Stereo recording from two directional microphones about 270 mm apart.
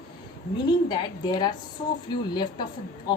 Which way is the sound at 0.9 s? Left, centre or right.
Centre.